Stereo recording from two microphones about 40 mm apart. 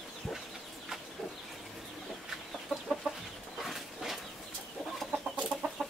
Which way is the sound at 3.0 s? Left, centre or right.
Right.